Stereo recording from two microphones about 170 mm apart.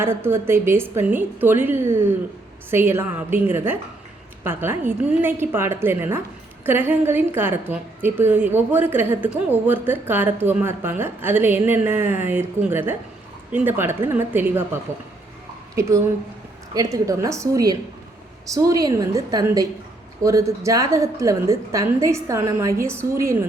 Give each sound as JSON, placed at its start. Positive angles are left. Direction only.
{"t": 0.0, "sound": "a woman's voice", "side_deg": -15}